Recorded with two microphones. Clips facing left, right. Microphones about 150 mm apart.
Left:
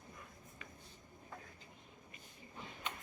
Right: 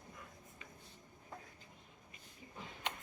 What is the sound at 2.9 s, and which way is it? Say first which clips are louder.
Tick-tock: right 3 dB; 90° right.